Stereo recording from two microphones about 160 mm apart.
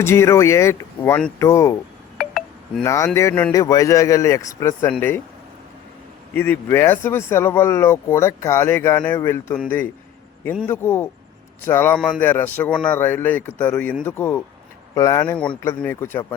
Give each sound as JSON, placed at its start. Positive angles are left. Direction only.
{"t": 0.0, "sound": "speech", "side_deg": 15}
{"t": 2.1, "sound": "telephone dialing", "side_deg": 0}
{"t": 2.8, "sound": "speech", "side_deg": 20}
{"t": 6.3, "sound": "speech", "side_deg": 15}
{"t": 15.4, "sound": "speech", "side_deg": 5}